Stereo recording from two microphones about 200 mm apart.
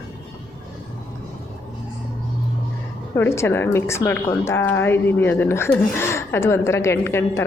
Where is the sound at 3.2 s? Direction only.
10° left (ahead or behind).